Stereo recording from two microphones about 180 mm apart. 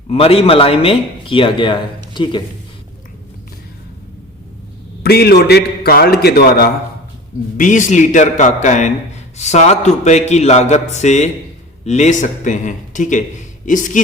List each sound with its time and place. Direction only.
0.1 s speech: 35° left (ahead or behind)
5.0 s a man's voice: 60° left (ahead or behind)
7.5 s a man's voice: 45° left (ahead or behind)